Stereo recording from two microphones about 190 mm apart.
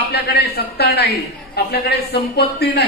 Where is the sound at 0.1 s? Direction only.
55° left (ahead or behind).